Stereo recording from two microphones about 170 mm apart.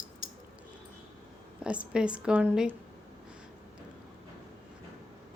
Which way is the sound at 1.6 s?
5° right (ahead or behind).